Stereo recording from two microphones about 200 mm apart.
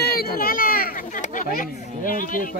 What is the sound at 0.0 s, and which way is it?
Speech, 50° left (ahead or behind).